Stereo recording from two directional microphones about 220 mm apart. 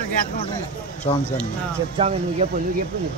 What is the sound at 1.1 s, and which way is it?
Speech, 25° left (ahead or behind).